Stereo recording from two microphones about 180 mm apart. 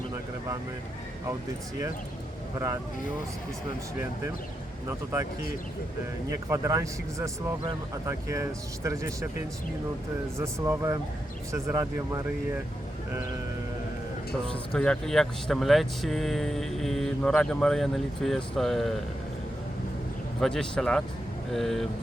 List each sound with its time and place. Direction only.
6.3 s speech: 15° right (ahead or behind)
10.3 s speech: 15° right (ahead or behind)
14.7 s speech: 5° left (ahead or behind)
20.4 s speech: 5° left (ahead or behind)